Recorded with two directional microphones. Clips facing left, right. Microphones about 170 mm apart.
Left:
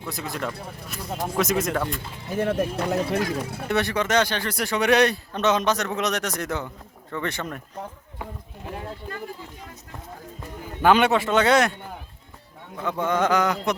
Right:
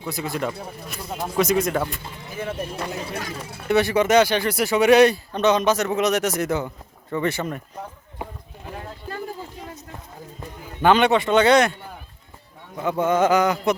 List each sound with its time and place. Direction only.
0.1 s speech: centre (ahead or behind)
2.4 s speech: 70° left (ahead or behind)
3.7 s speech: centre (ahead or behind)
10.8 s speech: 5° left (ahead or behind)
12.7 s speech: 5° right (ahead or behind)